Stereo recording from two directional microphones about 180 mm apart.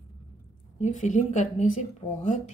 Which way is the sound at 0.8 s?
40° left (ahead or behind).